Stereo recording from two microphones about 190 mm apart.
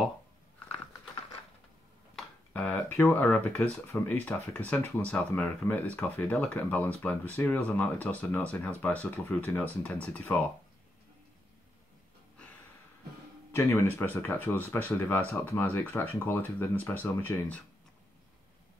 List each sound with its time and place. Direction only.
2.1 s speech: 5° left (ahead or behind)
13.5 s speech: 15° left (ahead or behind)